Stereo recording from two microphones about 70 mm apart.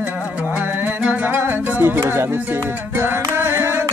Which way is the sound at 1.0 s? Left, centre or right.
Right.